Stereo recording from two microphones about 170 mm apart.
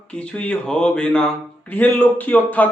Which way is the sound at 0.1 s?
5° left (ahead or behind).